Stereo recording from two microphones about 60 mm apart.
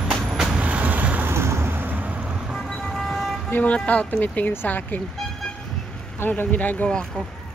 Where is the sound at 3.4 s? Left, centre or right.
Left.